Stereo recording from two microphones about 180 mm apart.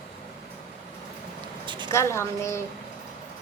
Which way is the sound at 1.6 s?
25° right (ahead or behind).